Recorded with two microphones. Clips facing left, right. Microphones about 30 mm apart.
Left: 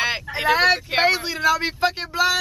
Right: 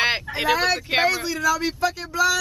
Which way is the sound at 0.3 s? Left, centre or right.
Centre.